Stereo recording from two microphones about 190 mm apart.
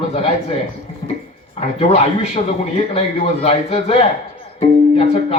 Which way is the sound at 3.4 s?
30° left (ahead or behind).